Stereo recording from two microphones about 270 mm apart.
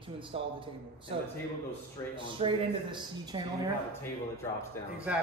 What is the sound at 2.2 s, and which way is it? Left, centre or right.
Speech, centre.